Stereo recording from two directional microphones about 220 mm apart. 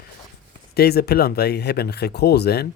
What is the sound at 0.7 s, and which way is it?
Speech, 45° left (ahead or behind).